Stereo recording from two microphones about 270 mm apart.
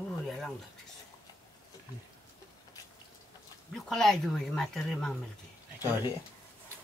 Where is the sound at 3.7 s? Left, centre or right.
Centre.